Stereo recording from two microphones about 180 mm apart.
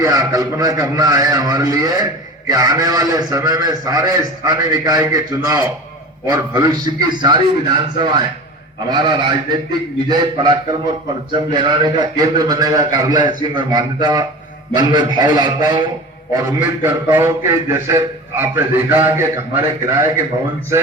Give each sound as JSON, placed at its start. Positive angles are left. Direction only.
{"t": 0.0, "sound": "a man's voice", "side_deg": -20}
{"t": 16.8, "sound": "a man's voice", "side_deg": -15}